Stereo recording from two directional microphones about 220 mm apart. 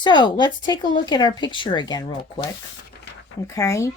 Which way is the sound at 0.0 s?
20° left (ahead or behind).